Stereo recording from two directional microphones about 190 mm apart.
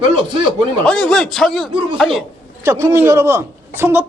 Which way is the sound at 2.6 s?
15° right (ahead or behind).